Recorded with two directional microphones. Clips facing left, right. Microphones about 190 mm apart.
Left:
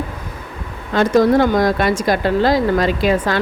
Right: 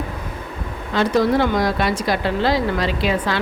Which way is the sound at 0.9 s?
45° left (ahead or behind).